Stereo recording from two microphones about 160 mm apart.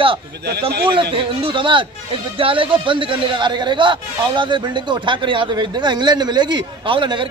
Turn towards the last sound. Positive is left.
turn(degrees=-30)  # may be behind; listen again after turning